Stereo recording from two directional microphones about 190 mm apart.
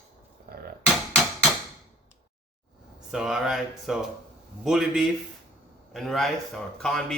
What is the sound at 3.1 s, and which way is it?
A man's voice, 5° right (ahead or behind).